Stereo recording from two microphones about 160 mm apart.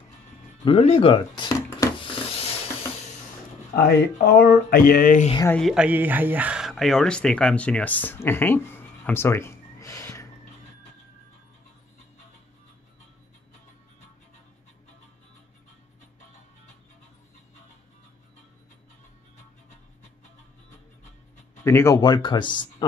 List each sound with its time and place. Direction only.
0.7 s speech: 40° left (ahead or behind); by 2.0 s 25° left (ahead or behind)
2.0 s a sound: 35° left (ahead or behind)
3.7 s speech: 75° left (ahead or behind); by 5.3 s 60° left (ahead or behind)
5.5 s speech: centre (ahead or behind); by 10.2 s 20° left (ahead or behind)
21.6 s speech: 20° left (ahead or behind)